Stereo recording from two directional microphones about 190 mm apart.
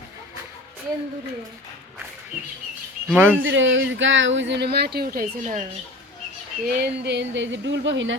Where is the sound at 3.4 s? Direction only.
80° right; by 5.6 s 40° right (ahead or behind).